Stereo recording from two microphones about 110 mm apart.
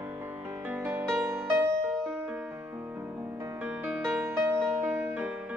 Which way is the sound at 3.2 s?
30° right (ahead or behind).